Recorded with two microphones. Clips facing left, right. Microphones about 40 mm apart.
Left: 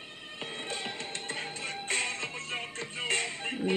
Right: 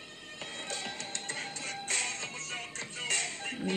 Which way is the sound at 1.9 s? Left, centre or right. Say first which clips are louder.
Left 4 dB; left.